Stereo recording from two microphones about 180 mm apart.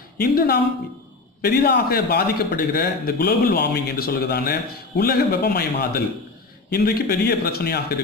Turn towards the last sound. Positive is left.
turn(degrees=60)  # may be behind; listen again after turning